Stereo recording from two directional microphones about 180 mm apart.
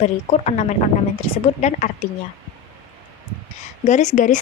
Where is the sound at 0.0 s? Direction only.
35° left (ahead or behind).